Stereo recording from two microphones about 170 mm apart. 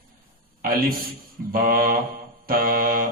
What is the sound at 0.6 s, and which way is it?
A man's voice, 55° right (ahead or behind).